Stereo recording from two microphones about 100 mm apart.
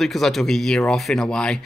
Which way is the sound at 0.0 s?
Centre (ahead or behind).